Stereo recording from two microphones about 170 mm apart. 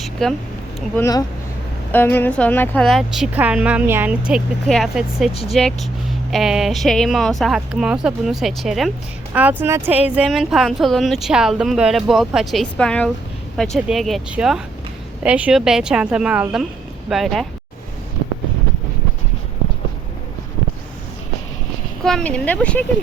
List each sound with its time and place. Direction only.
0.0 s a sound: centre (ahead or behind)
0.9 s speech: 20° left (ahead or behind); by 17.4 s centre (ahead or behind)
22.0 s speech: 5° left (ahead or behind)